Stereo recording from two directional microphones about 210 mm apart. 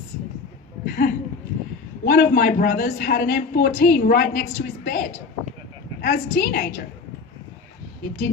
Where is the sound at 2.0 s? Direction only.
45° left (ahead or behind).